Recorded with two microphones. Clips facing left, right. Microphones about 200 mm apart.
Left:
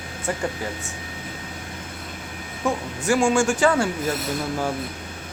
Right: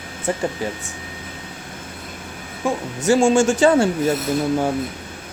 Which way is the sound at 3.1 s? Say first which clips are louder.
Right 4 dB; 25° right (ahead or behind).